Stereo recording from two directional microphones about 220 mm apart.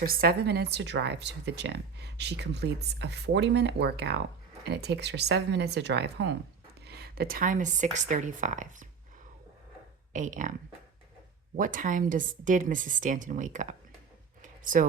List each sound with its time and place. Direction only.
0.0 s a woman's voice: 40° right (ahead or behind)
10.1 s speech: 35° right (ahead or behind)
11.5 s a woman's voice: 40° right (ahead or behind)
14.4 s a sound: 35° right (ahead or behind)